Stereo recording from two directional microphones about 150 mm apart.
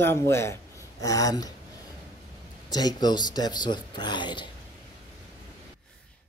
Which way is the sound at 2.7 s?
25° left (ahead or behind).